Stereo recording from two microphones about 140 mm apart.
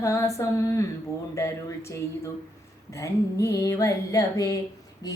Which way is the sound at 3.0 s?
20° left (ahead or behind).